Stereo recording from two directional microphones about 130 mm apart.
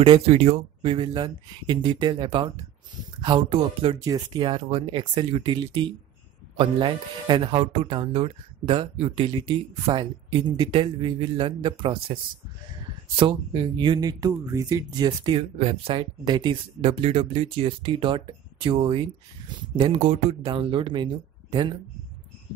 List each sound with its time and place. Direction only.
0.0 s speech: 45° right (ahead or behind)
4.0 s speech: 30° right (ahead or behind)
13.1 s speech: 40° right (ahead or behind)
15.5 s speech: 45° right (ahead or behind)
16.8 s speech: 50° right (ahead or behind)
20.4 s speech: 40° right (ahead or behind)